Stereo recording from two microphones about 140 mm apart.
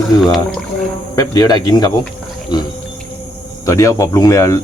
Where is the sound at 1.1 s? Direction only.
25° left (ahead or behind).